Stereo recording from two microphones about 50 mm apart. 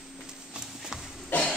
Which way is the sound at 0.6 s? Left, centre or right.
Centre.